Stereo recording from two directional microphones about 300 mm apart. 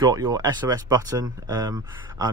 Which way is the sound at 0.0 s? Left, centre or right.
Centre.